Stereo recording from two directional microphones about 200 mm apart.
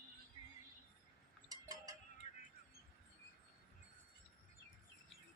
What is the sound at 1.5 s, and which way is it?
Cowbell, 20° right (ahead or behind).